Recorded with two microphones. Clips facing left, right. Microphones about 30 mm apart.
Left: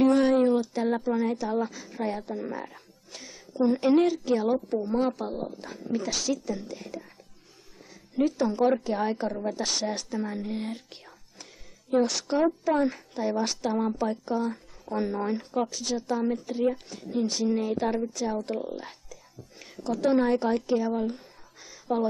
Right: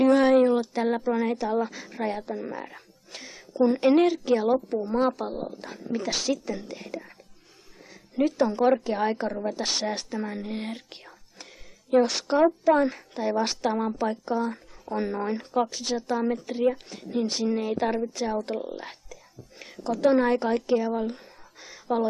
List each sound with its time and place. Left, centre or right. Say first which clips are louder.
0.0 s a sound: right 2 dB; right
0.3 s a woman's voice: right 3 dB; right
2.1 s speech: right 1 dB; centre
2.7 s a woman's voice: right 3 dB; right
4.6 s a woman's voice: right 2 dB; centre; by 7.2 s right
8.2 s a woman's voice: right 1 dB; right
11.1 s whispering: right 2 dB; right
11.9 s a woman's voice: right 3 dB; right
20.5 s a sound: right 2 dB; right